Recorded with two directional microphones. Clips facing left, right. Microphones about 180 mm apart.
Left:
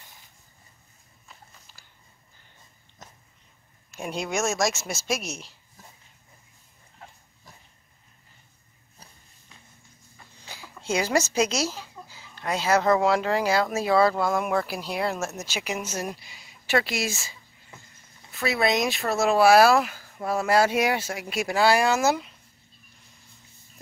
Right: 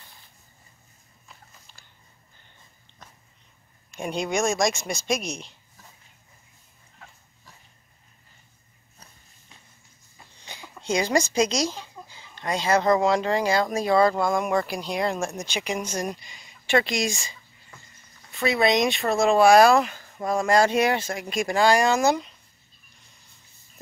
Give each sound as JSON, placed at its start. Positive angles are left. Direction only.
{"t": 1.7, "sound": "biting", "side_deg": 5}
{"t": 3.9, "sound": "a woman's voice", "side_deg": 0}
{"t": 10.4, "sound": "a sound", "side_deg": 5}
{"t": 10.8, "sound": "a woman's voice", "side_deg": 5}